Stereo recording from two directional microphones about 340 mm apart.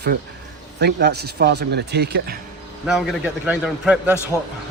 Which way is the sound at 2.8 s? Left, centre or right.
Centre.